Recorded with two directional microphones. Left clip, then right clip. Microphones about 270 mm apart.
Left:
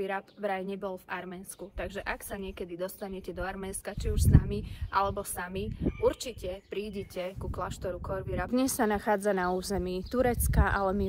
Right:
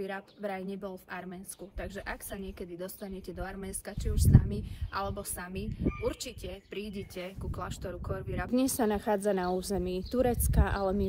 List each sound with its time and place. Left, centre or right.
0.0 s a woman's voice: centre